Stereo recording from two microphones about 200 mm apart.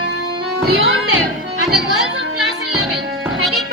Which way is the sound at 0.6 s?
90° right.